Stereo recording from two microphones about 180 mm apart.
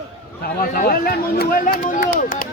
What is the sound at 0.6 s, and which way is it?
Speech, 50° left (ahead or behind).